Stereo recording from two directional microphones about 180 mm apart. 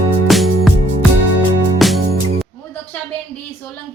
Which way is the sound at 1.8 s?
Centre (ahead or behind).